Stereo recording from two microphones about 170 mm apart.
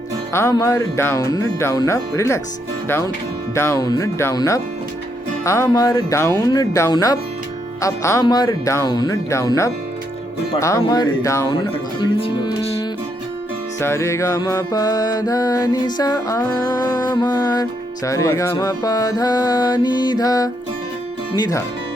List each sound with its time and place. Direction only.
0.3 s speech: 20° left (ahead or behind)
3.5 s music: 15° left (ahead or behind)
5.5 s speech: 15° left (ahead or behind)
6.4 s music: 20° left (ahead or behind)
13.7 s music: 15° left (ahead or behind)